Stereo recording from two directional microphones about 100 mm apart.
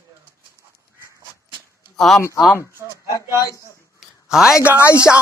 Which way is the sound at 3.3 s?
35° left (ahead or behind).